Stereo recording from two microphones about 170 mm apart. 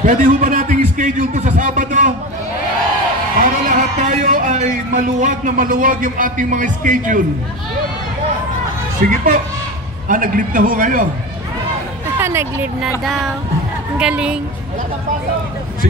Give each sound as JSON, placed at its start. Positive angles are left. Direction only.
{"t": 0.0, "sound": "a man's voice", "side_deg": -50}
{"t": 3.3, "sound": "a man's voice", "side_deg": -50}
{"t": 9.1, "sound": "a man's voice", "side_deg": -55}
{"t": 12.2, "sound": "speech", "side_deg": -15}
{"t": 13.0, "sound": "a woman's voice", "side_deg": 0}